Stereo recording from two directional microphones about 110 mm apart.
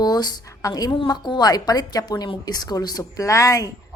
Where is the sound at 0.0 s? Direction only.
40° left (ahead or behind).